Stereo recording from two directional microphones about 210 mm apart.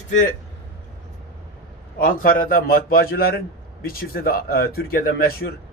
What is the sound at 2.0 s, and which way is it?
Speech, 40° left (ahead or behind).